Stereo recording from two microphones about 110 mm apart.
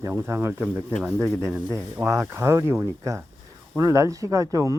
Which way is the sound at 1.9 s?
25° right (ahead or behind).